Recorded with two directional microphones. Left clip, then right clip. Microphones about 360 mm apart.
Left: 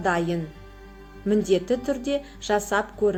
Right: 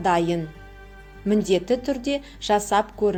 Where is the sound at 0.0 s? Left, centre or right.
Centre.